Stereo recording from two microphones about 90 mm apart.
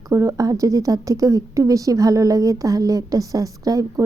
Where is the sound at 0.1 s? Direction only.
35° right (ahead or behind).